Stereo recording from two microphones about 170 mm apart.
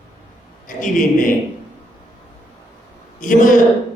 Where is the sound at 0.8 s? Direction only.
50° left (ahead or behind).